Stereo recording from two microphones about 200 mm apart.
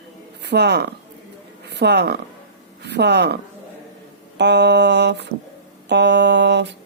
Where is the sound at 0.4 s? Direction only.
55° right (ahead or behind).